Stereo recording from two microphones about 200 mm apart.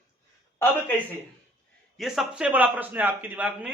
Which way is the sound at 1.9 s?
Centre (ahead or behind).